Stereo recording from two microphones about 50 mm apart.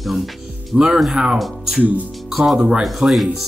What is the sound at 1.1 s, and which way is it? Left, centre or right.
Speech, centre.